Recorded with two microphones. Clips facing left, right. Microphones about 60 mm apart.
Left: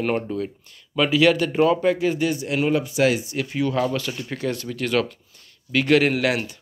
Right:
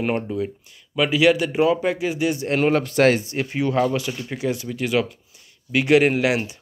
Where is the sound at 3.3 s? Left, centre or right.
Right.